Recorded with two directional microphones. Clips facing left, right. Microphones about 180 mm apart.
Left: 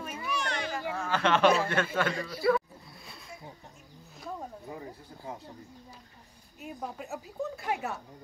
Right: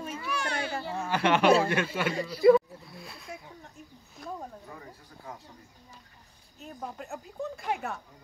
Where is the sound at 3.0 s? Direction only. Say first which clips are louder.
Right 3 dB; centre (ahead or behind).